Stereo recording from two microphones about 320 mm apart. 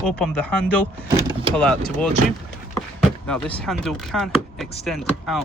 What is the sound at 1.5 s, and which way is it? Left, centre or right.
Speech, centre.